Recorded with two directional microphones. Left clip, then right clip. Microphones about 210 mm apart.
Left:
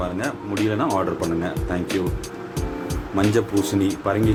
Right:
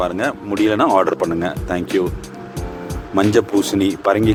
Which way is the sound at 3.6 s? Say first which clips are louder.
Right 5 dB; 40° right (ahead or behind).